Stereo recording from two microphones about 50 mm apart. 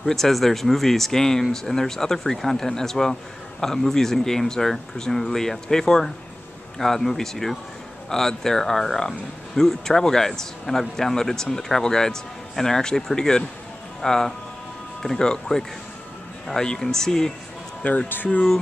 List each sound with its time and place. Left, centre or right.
0.0 s a man's voice: centre
18.0 s speech: left